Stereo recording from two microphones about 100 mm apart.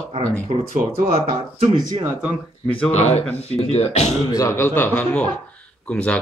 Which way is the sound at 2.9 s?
90° left.